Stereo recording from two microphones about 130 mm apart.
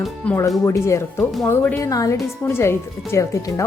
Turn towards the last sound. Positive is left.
turn(degrees=25)  # may be behind; listen again after turning